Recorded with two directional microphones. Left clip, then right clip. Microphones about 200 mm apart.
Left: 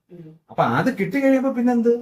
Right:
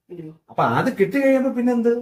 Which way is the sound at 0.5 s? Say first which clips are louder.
Even; 20° right (ahead or behind).